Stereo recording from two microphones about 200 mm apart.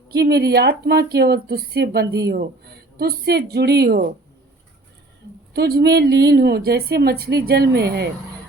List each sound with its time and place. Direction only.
0.1 s a woman's voice: 55° right (ahead or behind)
5.5 s a woman's voice: 55° right (ahead or behind)